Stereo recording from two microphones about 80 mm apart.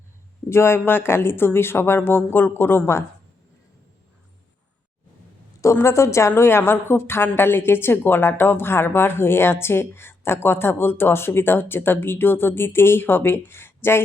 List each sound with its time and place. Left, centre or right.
0.5 s a woman's voice: left
5.7 s a woman's voice: left